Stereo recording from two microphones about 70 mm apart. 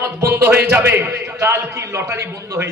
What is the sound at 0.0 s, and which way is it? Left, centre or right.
A man's voice, right.